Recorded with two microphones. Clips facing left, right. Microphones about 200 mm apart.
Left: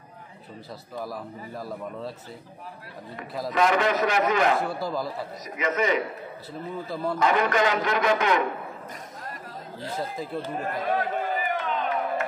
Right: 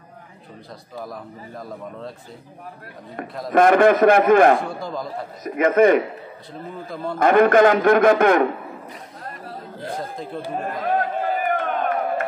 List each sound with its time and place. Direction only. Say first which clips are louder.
1.0 s a man's voice: even; 5° left (ahead or behind)
3.4 s a man's voice: right 9 dB; 50° right (ahead or behind)
4.6 s a man's voice: even; 5° left (ahead or behind)
5.4 s a man's voice: right 11 dB; 55° right (ahead or behind)
7.2 s a man's voice: right 10 dB; 55° right (ahead or behind)
9.9 s a man's voice: left 1 dB; 5° left (ahead or behind)
10.8 s a sound: right 4 dB; 50° right (ahead or behind)